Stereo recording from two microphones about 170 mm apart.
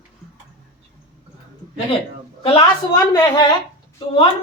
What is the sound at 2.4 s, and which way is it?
Speech, 35° left (ahead or behind).